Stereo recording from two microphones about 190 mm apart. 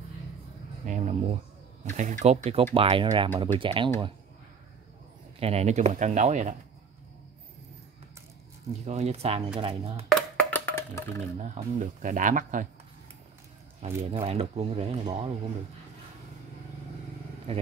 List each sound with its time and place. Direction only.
0.8 s speech: 40° right (ahead or behind)
5.4 s speech: 35° right (ahead or behind)
8.8 s speech: 35° right (ahead or behind)
10.0 s wood block: 10° left (ahead or behind)
11.3 s speech: 40° right (ahead or behind)
13.8 s speech: 35° right (ahead or behind)
17.5 s speech: 30° right (ahead or behind)